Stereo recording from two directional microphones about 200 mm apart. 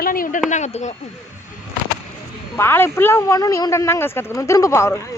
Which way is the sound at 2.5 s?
10° left (ahead or behind).